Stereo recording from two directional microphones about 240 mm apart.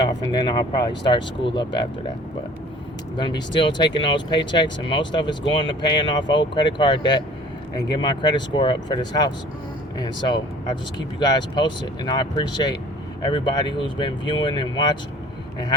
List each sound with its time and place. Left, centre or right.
0.0 s speech: centre
3.2 s speech: centre